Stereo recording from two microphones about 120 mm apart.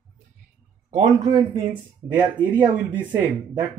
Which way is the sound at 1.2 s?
35° right (ahead or behind).